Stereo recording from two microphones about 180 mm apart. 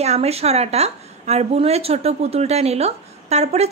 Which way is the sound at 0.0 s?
35° right (ahead or behind).